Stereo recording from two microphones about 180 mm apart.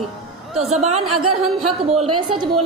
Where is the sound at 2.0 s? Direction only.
30° right (ahead or behind).